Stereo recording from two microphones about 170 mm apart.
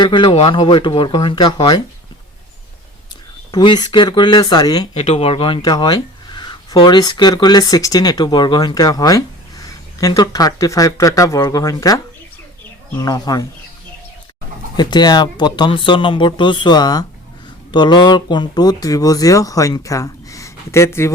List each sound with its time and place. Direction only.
0.0 s speech: 25° left (ahead or behind)
3.5 s speech: 25° left (ahead or behind)
4.9 s speech: 35° left (ahead or behind); by 11.9 s 20° left (ahead or behind)
13.0 s speech: 25° left (ahead or behind)
14.8 s speech: 25° left (ahead or behind)